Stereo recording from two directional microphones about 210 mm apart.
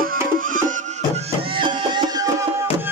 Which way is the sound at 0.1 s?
40° right (ahead or behind).